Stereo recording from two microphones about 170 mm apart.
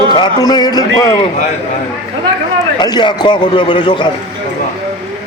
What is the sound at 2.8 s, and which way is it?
A man's voice, 25° left (ahead or behind).